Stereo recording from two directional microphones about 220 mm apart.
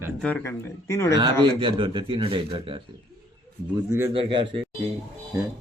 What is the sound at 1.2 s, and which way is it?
Speech, 20° right (ahead or behind).